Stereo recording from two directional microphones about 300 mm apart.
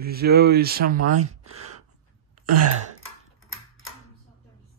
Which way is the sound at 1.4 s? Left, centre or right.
Right.